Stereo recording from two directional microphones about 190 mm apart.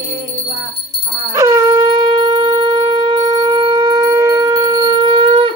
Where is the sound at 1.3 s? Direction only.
15° right (ahead or behind).